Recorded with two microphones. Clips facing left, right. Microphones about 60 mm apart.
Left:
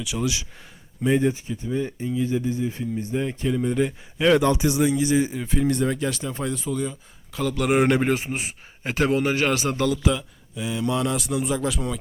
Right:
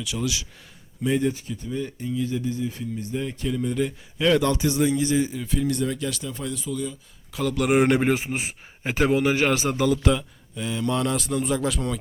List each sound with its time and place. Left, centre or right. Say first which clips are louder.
0.0 s speech: left 2 dB; centre; by 6.9 s left
7.3 s speech: even; centre
8.1 s a man's voice: even; right
9.6 s a man's voice: even; centre
9.9 s speech: right 1 dB; centre